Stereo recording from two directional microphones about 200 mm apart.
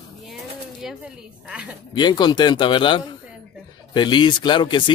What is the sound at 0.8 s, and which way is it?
Speech, 5° right (ahead or behind).